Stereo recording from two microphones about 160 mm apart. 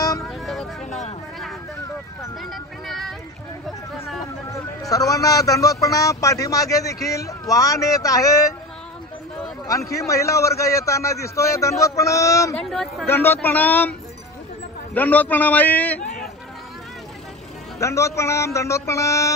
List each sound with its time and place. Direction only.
0.2 s a sound: centre (ahead or behind)
0.8 s a sound: 45° left (ahead or behind)
2.5 s a sound: centre (ahead or behind)
4.5 s a man's voice: 20° left (ahead or behind)
9.7 s a man's voice: 20° left (ahead or behind)
12.6 s speech: centre (ahead or behind)
13.0 s a man's voice: 15° left (ahead or behind)
15.0 s a man's voice: 10° left (ahead or behind)
17.7 s a man's voice: 20° left (ahead or behind)